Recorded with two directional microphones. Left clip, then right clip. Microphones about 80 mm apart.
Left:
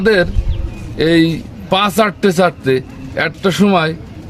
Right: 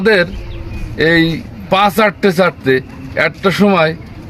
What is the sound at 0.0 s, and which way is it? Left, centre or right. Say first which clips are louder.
A man's voice: right 1 dB; left.